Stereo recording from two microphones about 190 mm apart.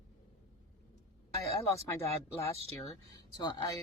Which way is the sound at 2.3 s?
15° left (ahead or behind).